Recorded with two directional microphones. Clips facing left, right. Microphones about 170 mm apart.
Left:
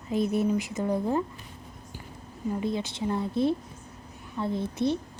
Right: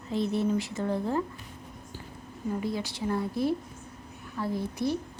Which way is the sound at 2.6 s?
20° left (ahead or behind).